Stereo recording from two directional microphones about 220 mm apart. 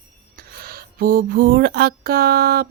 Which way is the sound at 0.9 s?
40° right (ahead or behind).